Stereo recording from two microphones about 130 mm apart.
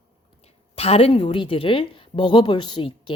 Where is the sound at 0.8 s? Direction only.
50° left (ahead or behind).